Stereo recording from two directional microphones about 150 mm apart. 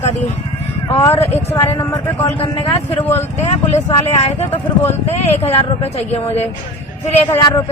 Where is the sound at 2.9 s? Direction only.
15° left (ahead or behind).